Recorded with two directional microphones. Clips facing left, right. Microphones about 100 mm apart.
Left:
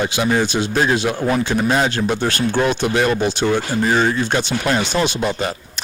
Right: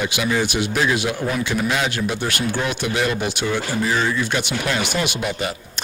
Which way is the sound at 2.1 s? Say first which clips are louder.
Left 4 dB; 50° left (ahead or behind).